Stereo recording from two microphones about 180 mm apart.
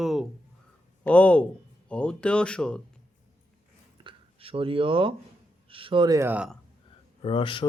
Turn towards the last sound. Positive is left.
turn(degrees=30)  # may be behind; listen again after turning